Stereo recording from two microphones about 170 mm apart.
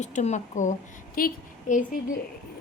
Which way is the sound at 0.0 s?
45° left (ahead or behind).